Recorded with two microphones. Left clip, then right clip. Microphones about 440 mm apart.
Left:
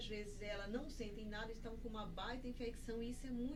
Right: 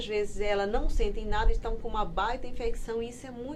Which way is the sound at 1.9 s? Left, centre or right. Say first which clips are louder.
Right 19 dB; right.